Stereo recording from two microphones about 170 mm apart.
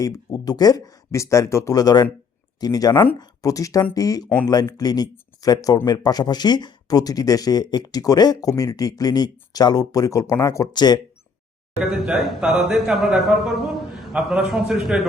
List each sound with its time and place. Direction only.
0.0 s speech: 20° left (ahead or behind)
11.8 s a man's voice: centre (ahead or behind)